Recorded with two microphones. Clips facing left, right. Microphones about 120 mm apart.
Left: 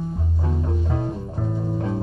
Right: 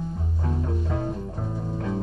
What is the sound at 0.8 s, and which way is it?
Music, 30° left (ahead or behind).